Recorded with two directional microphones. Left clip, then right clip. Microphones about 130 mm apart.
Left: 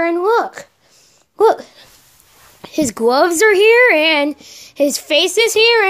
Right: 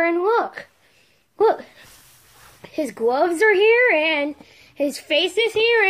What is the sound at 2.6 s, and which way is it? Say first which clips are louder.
Speech: left 6 dB; 90° left.